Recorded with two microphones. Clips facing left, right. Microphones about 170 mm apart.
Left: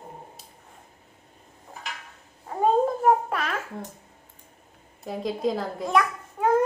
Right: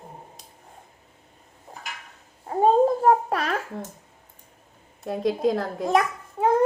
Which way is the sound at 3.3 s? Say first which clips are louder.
Right 3 dB; 40° right (ahead or behind).